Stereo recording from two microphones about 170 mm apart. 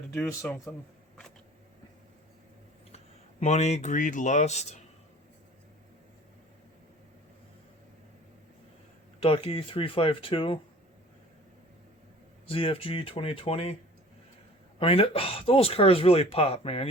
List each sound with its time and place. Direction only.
0.4 s speech: 15° left (ahead or behind)
3.4 s speech: 40° left (ahead or behind)
9.2 s speech: 35° left (ahead or behind)
12.5 s speech: 30° left (ahead or behind)
14.8 s speech: 35° left (ahead or behind)